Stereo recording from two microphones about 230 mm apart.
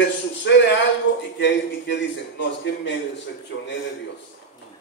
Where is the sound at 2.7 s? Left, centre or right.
Left.